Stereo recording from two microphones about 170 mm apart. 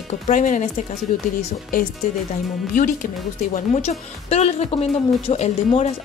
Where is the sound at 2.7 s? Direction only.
55° left (ahead or behind).